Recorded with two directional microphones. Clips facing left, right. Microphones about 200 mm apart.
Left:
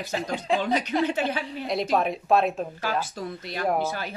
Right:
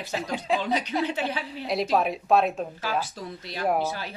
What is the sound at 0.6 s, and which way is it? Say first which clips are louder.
Speech: left 2 dB; 50° left (ahead or behind).